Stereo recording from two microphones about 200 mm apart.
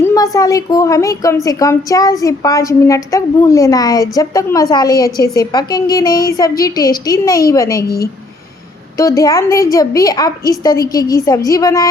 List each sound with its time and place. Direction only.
0.0 s a woman's voice: 15° left (ahead or behind)
9.0 s a woman's voice: 15° left (ahead or behind)